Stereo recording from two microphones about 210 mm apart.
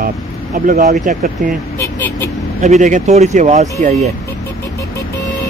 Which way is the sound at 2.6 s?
35° right (ahead or behind).